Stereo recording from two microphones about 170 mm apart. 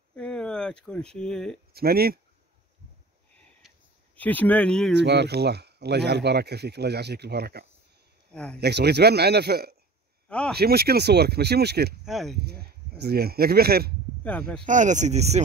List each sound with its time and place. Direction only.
0.1 s speech: 5° left (ahead or behind)
1.7 s speech: 65° right (ahead or behind)
4.2 s speech: 10° left (ahead or behind)
4.9 s speech: 85° right
8.3 s speech: 5° left (ahead or behind)
8.5 s speech: 75° right (ahead or behind)
10.2 s speech: 5° left (ahead or behind)
10.6 s speech: 65° right (ahead or behind)
12.0 s speech: centre (ahead or behind)
12.4 s speech: 70° right (ahead or behind)
14.2 s speech: 10° left (ahead or behind)
14.7 s speech: 45° right (ahead or behind)